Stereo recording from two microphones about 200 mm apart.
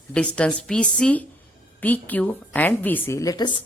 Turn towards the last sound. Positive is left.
turn(degrees=20)  # may be behind; listen again after turning